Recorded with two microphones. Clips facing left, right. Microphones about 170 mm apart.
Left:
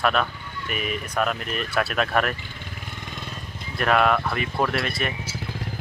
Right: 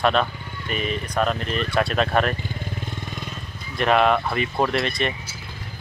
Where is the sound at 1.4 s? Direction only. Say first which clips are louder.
Right 3 dB; 5° left (ahead or behind).